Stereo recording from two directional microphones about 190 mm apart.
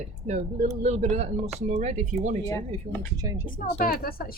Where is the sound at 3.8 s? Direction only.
50° left (ahead or behind).